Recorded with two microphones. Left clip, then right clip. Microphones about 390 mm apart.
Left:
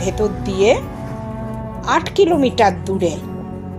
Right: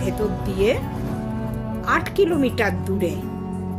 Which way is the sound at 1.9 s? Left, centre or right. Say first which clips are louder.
Left 5 dB; right.